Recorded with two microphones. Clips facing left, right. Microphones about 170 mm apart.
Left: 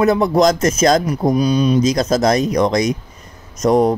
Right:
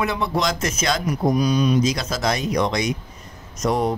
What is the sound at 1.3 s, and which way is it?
Speech, 30° left (ahead or behind).